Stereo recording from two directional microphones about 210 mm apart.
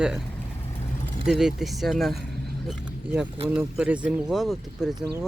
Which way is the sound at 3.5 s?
5° right (ahead or behind).